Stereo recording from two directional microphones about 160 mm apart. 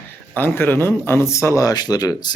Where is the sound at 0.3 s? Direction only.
15° left (ahead or behind).